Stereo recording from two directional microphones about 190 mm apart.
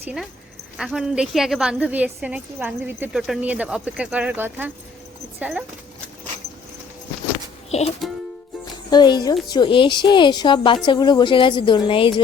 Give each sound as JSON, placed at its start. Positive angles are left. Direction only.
{"t": 0.0, "sound": "a woman's voice", "side_deg": -5}
{"t": 8.0, "sound": "music", "side_deg": 0}
{"t": 8.9, "sound": "a woman's voice", "side_deg": 20}